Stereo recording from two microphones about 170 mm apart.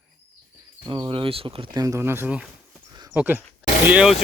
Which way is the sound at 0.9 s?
30° right (ahead or behind).